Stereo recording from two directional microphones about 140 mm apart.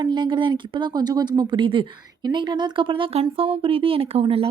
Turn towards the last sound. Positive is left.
turn(degrees=-45)  # may be behind; listen again after turning